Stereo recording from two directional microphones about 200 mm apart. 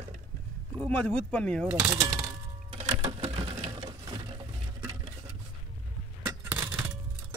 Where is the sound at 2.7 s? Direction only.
30° right (ahead or behind).